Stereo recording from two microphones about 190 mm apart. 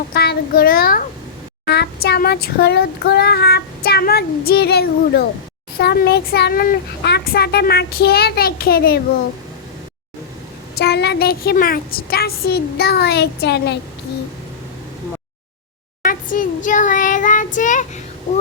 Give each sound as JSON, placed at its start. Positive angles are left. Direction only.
{"t": 0.1, "sound": "a child's voice", "side_deg": 55}
{"t": 1.6, "sound": "child singing", "side_deg": 60}
{"t": 10.8, "sound": "child singing", "side_deg": 60}
{"t": 16.0, "sound": "child singing", "side_deg": 45}